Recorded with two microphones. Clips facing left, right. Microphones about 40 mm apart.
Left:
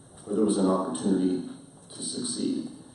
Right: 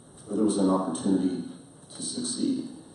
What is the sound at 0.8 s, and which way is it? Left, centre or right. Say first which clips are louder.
Speech: even; left.